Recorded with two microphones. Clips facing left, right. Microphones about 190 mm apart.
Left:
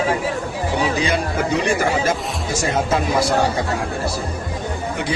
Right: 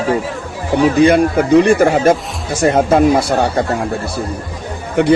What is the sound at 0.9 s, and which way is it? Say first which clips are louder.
Speech: right 10 dB; 55° right (ahead or behind).